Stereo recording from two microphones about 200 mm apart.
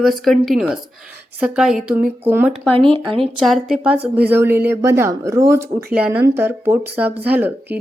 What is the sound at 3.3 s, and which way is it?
A woman's voice, centre (ahead or behind).